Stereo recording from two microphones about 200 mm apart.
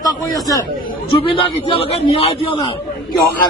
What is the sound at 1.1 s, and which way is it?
A man's voice, 25° left (ahead or behind).